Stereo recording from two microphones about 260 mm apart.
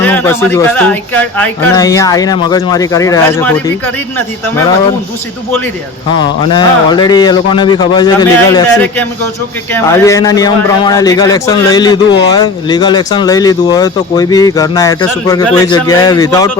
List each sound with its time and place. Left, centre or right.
0.0 s speech: centre
6.5 s speech: centre